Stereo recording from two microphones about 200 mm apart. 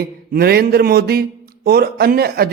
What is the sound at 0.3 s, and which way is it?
A man's voice, 50° right (ahead or behind).